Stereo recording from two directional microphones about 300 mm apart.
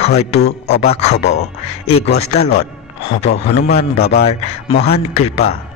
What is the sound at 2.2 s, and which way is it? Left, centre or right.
A man's voice, left.